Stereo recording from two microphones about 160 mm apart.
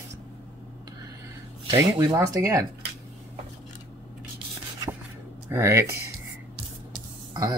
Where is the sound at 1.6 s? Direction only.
25° right (ahead or behind).